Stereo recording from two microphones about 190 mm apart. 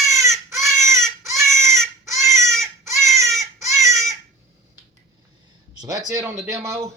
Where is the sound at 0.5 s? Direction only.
Centre (ahead or behind).